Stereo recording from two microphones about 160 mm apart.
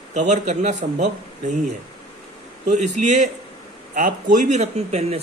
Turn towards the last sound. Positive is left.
turn(degrees=-40)  # may be behind; listen again after turning